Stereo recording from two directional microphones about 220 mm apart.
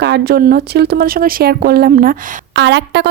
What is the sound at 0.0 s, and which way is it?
A woman's voice, 45° right (ahead or behind).